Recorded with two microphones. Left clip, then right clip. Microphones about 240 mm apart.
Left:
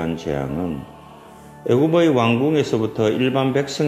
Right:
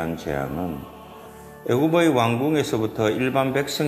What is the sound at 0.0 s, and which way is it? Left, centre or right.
Speech, centre.